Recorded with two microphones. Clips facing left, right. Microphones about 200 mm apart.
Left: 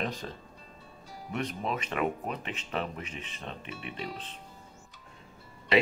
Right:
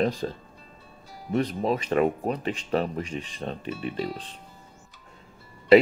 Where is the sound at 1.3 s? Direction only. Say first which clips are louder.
Right 8 dB; 35° right (ahead or behind).